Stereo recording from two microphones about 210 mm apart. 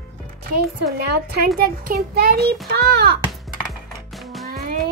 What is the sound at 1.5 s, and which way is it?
Child singing, 45° right (ahead or behind).